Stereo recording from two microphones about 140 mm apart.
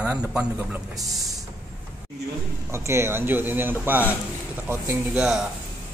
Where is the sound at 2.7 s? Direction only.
20° right (ahead or behind).